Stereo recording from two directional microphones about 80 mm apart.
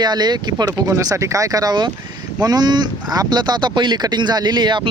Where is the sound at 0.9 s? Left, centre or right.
Right.